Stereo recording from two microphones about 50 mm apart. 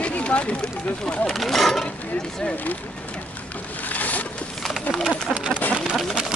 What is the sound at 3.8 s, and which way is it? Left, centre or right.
Boat, left.